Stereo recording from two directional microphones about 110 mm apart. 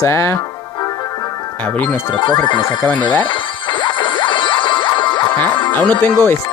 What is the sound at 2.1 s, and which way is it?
Music, 45° left (ahead or behind).